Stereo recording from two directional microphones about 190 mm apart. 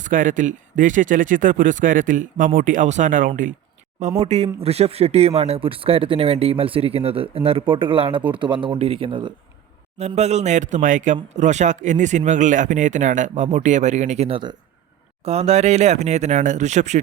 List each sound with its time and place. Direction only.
0.0 s speech: 45° right (ahead or behind)
4.2 s a man's voice: 35° right (ahead or behind)